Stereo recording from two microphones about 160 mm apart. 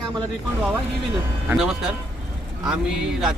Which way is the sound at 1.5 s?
5° right (ahead or behind).